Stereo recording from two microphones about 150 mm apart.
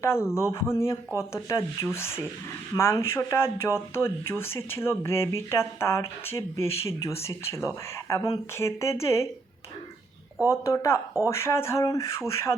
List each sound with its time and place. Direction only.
0.0 s speech: 15° left (ahead or behind)
10.5 s speech: 20° left (ahead or behind)